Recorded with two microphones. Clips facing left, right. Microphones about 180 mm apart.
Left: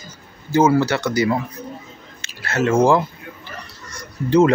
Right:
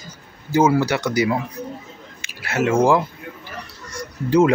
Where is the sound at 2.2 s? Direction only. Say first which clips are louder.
Left 1 dB; 10° right (ahead or behind).